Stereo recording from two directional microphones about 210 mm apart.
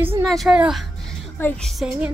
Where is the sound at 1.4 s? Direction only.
10° left (ahead or behind).